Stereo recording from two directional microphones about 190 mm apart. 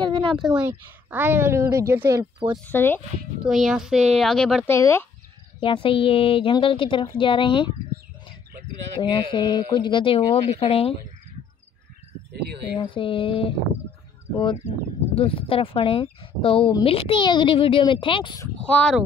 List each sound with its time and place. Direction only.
0.0 s speech: 25° right (ahead or behind)
0.6 s a woman's voice: 10° right (ahead or behind)
2.6 s speech: 10° left (ahead or behind)
3.4 s a child's voice: centre (ahead or behind)
4.6 s speech: 15° left (ahead or behind)
5.6 s speech: 30° left (ahead or behind)
9.0 s speech: 25° left (ahead or behind)
12.7 s speech: 25° left (ahead or behind)
14.7 s speech: 30° left (ahead or behind)
18.6 s a child's voice: 5° left (ahead or behind)